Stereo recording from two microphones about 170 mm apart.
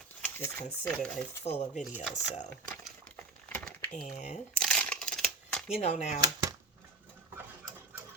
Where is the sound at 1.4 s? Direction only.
40° left (ahead or behind).